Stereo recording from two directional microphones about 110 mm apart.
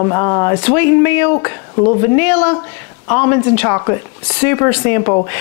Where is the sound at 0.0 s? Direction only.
30° left (ahead or behind).